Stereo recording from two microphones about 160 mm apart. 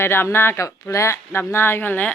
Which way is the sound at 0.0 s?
15° left (ahead or behind).